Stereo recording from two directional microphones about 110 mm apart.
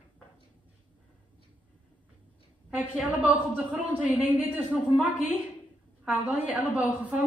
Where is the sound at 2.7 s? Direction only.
15° right (ahead or behind).